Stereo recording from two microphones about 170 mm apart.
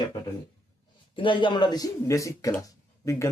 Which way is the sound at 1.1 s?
30° left (ahead or behind).